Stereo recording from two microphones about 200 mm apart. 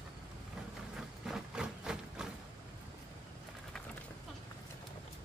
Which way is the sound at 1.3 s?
5° right (ahead or behind).